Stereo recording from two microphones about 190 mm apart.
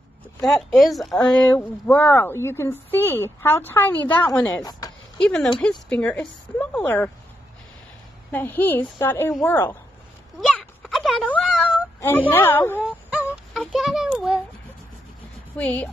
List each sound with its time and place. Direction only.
0.5 s a woman's voice: centre (ahead or behind); by 4.9 s 20° left (ahead or behind)
5.2 s a woman's voice: 5° left (ahead or behind)
8.3 s speech: 10° left (ahead or behind)
10.4 s a sound: centre (ahead or behind)
12.0 s speech: 10° left (ahead or behind)
12.8 s child singing: 5° right (ahead or behind)
15.5 s speech: 10° left (ahead or behind)